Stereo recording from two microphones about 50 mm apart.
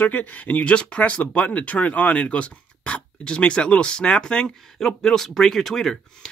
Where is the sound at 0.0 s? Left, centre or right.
Left.